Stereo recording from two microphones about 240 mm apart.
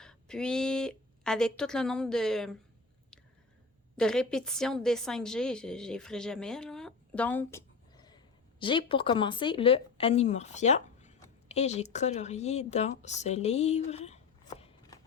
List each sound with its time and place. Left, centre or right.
0.0 s speech: centre
3.9 s a woman's voice: centre; by 14.7 s left